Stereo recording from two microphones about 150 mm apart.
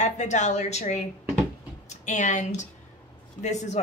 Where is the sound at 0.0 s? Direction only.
50° left (ahead or behind).